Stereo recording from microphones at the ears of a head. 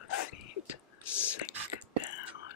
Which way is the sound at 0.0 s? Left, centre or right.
Left.